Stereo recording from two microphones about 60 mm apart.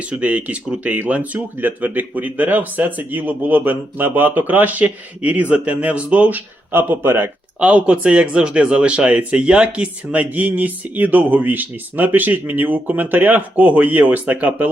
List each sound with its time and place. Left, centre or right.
0.0 s speech: right
7.6 s speech: right